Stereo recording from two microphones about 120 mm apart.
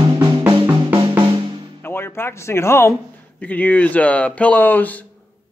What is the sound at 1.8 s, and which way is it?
Speech, 20° left (ahead or behind).